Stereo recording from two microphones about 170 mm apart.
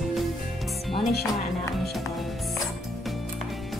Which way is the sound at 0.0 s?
Centre (ahead or behind).